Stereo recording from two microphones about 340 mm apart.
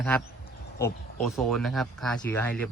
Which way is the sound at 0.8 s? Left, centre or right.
Centre.